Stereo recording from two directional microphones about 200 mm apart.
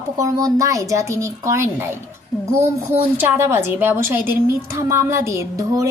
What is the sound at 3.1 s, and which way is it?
Speech, 10° right (ahead or behind).